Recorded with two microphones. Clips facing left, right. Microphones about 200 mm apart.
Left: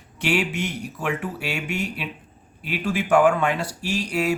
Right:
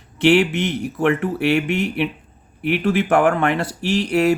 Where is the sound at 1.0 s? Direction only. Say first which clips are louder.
Right 9 dB; 60° right (ahead or behind).